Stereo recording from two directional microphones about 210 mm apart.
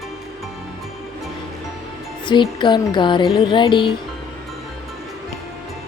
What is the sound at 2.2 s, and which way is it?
Music, 20° left (ahead or behind).